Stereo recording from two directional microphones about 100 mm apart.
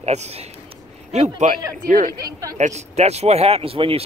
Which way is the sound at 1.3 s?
35° right (ahead or behind).